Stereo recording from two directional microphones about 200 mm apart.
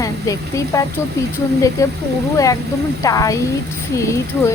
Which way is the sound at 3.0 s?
15° left (ahead or behind).